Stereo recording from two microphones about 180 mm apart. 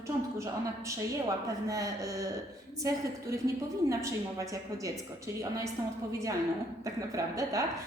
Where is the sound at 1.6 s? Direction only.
20° right (ahead or behind).